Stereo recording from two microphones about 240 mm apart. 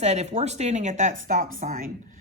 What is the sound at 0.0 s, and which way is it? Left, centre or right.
A woman's voice, right.